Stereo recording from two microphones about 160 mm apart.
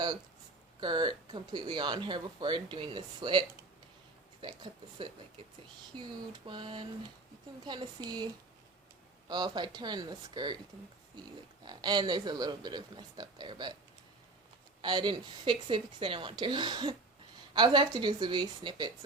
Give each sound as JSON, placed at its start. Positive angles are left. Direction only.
{"t": 0.8, "sound": "speech", "side_deg": -30}
{"t": 6.0, "sound": "a sound", "side_deg": -30}
{"t": 7.6, "sound": "speech", "side_deg": -30}
{"t": 11.6, "sound": "speech", "side_deg": -25}
{"t": 14.8, "sound": "speech", "side_deg": -30}